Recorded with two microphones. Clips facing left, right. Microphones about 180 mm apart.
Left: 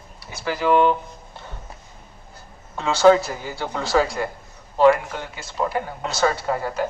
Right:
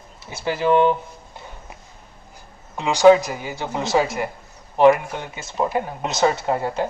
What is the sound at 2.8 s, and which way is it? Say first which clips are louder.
Speech: right 2 dB; 15° right (ahead or behind).